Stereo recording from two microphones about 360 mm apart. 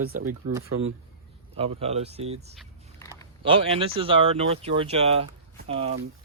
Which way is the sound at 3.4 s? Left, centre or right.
Centre.